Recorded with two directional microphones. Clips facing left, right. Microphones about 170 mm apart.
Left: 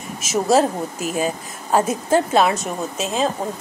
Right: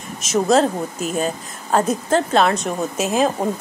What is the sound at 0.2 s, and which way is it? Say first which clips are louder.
A woman's voice: right 1 dB; 5° left (ahead or behind).